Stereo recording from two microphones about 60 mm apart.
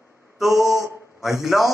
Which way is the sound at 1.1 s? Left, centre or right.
Centre.